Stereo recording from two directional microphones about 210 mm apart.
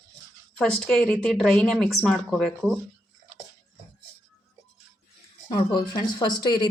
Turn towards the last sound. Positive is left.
turn(degrees=20)  # may be behind; listen again after turning